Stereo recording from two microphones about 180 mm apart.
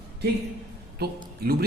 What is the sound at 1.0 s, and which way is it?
Speech, 60° right (ahead or behind).